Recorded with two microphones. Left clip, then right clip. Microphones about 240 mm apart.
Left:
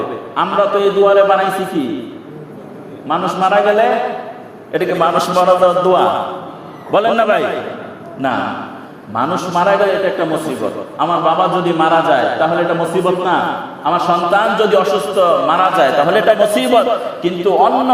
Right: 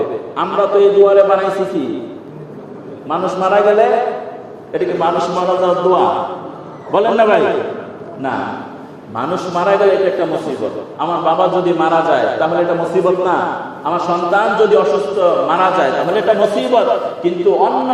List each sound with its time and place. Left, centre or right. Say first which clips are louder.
0.3 s a man's voice: even; left
3.1 s a man's voice: left 1 dB; left
4.7 s mantra: left 2 dB; left
9.1 s a man's voice: left 3 dB; left
13.8 s mantra: left 3 dB; left